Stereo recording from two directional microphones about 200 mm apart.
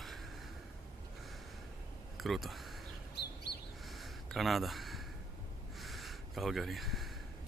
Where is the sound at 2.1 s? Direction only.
Centre (ahead or behind).